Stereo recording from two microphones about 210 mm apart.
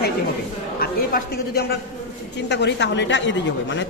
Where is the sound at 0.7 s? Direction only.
50° left (ahead or behind).